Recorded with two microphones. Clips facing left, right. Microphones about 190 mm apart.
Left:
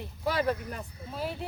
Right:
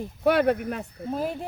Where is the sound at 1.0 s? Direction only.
45° right (ahead or behind).